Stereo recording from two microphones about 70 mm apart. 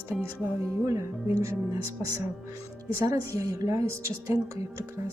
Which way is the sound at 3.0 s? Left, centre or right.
Right.